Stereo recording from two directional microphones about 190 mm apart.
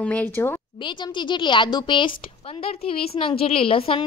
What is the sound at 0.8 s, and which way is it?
A woman's voice, 25° left (ahead or behind).